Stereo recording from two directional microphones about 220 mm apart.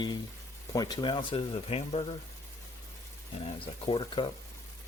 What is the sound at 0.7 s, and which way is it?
Speech, 20° left (ahead or behind).